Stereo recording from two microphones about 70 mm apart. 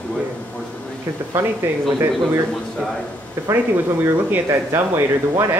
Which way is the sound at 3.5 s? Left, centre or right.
Right.